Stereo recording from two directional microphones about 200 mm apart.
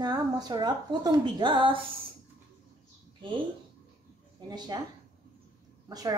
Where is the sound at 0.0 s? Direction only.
20° right (ahead or behind).